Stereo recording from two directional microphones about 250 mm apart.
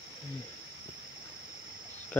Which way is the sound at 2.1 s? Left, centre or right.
Centre.